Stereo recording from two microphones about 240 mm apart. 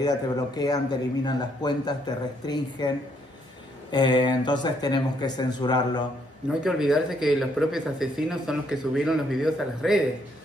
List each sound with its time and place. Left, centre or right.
0.0 s speech: centre
3.9 s speech: centre
6.6 s speech: centre